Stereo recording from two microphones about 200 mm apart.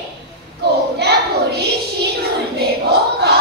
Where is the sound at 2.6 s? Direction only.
55° right (ahead or behind).